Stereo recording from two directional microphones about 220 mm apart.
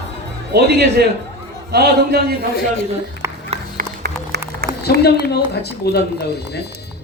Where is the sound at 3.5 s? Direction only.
40° right (ahead or behind).